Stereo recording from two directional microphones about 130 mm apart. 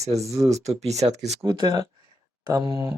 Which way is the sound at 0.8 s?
55° right (ahead or behind).